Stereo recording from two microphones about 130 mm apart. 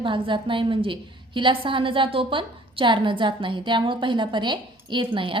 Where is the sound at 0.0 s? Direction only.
40° right (ahead or behind).